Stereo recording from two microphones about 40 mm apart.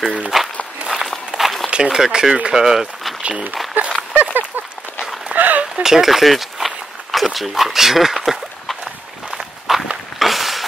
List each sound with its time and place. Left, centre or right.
0.3 s walk: centre
1.4 s a sound: centre
1.8 s speech: centre
3.8 s horse: right
4.1 s a sound: right
5.8 s walk: centre
7.3 s speech: centre
9.7 s walk: centre
10.1 s a sound: centre